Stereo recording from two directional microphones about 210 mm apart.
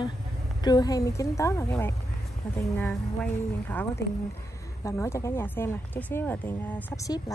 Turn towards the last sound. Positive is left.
turn(degrees=15)  # may be behind; listen again after turning